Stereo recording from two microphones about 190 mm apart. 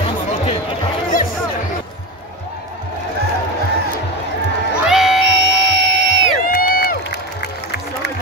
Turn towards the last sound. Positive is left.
turn(degrees=50)  # may be behind; listen again after turning